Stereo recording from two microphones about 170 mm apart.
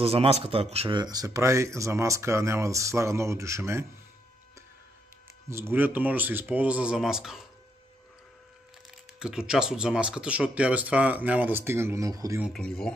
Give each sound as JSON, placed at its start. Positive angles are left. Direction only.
{"t": 0.0, "sound": "speech", "side_deg": -35}
{"t": 5.5, "sound": "speech", "side_deg": -15}
{"t": 9.2, "sound": "speech", "side_deg": -5}
{"t": 12.5, "sound": "speech", "side_deg": 5}